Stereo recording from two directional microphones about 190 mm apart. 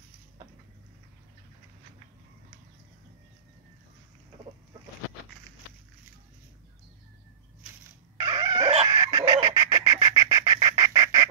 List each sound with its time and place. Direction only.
8.2 s dog: 20° right (ahead or behind)
8.8 s bird: 20° right (ahead or behind)